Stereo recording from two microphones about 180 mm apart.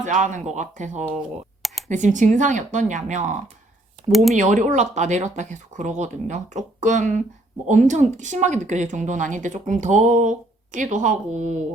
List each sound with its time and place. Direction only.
0.0 s speech: 45° right (ahead or behind)
4.1 s speech: centre (ahead or behind)
4.4 s speech: 40° right (ahead or behind)